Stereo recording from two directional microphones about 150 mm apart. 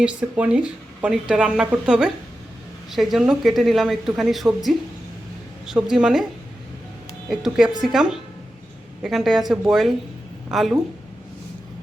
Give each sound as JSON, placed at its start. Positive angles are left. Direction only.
{"t": 0.0, "sound": "a woman's voice", "side_deg": -5}
{"t": 7.3, "sound": "a woman's voice", "side_deg": -5}